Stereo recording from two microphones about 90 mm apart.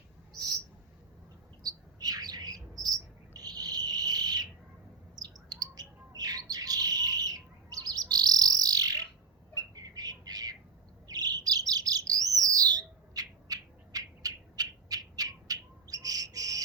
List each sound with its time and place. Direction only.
1.6 s bird: 45° right (ahead or behind)
9.6 s squawk: 45° right (ahead or behind)
11.1 s bird: 45° right (ahead or behind)